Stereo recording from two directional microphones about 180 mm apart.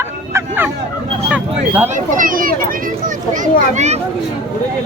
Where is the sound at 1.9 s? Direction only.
50° right (ahead or behind).